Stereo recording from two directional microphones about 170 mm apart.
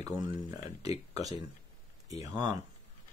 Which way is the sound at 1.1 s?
20° right (ahead or behind).